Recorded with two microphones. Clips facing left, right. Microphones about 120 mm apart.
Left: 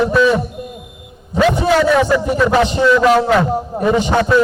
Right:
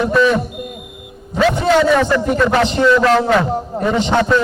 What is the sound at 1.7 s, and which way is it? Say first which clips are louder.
A man's voice: right 1 dB; 5° left (ahead or behind).